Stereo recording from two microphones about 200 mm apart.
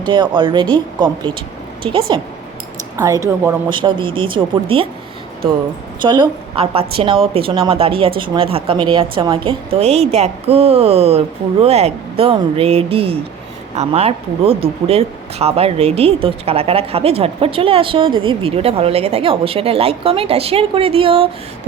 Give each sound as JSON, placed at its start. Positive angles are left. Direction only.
{"t": 0.0, "sound": "speech", "side_deg": -25}
{"t": 3.7, "sound": "speech", "side_deg": -25}
{"t": 6.0, "sound": "speech", "side_deg": -25}